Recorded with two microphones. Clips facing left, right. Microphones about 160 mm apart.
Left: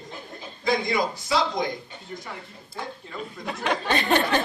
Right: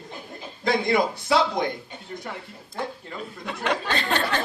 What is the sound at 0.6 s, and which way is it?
Speech, 60° right (ahead or behind).